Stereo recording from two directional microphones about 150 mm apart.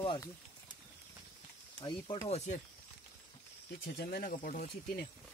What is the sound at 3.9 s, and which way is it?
Speech, 80° left.